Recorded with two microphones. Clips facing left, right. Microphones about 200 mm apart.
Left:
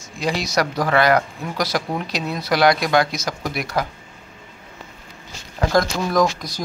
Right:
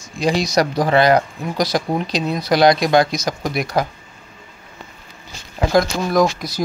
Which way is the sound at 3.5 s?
20° right (ahead or behind).